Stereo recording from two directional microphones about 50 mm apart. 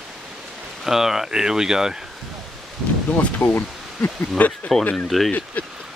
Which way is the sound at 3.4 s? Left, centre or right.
Left.